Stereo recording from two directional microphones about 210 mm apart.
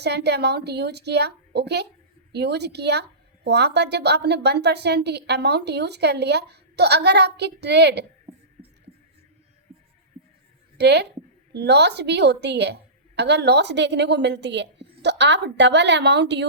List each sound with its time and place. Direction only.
0.0 s a woman's voice: 50° right (ahead or behind)
8.6 s a sound: 30° right (ahead or behind)
10.8 s a woman's voice: 55° right (ahead or behind)